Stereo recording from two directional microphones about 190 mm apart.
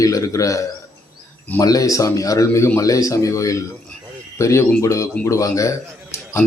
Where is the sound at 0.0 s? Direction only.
15° left (ahead or behind).